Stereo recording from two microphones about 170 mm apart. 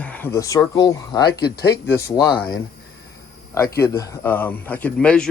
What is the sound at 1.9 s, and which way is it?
Speech, 15° left (ahead or behind).